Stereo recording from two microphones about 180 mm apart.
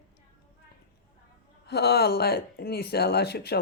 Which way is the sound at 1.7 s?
65° left (ahead or behind).